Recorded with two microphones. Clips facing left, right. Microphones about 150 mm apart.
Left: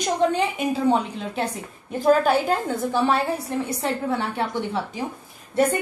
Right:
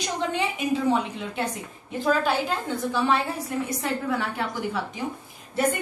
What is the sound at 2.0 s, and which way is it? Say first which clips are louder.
Speech: left 5 dB; 45° left (ahead or behind).